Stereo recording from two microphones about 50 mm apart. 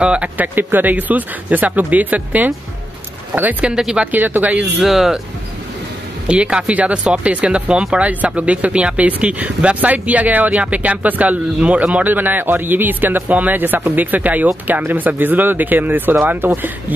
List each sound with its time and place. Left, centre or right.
0.0 s speech: right
0.4 s a man's voice: right
3.6 s speech: centre
4.0 s a man's voice: right
4.6 s speech: centre
6.2 s speech: right
12.1 s a man's voice: right